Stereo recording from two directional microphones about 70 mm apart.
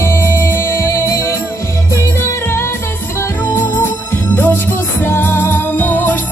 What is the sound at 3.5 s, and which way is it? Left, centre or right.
Music, left.